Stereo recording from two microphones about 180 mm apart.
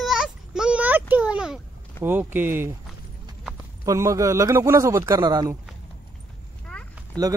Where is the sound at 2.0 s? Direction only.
10° right (ahead or behind).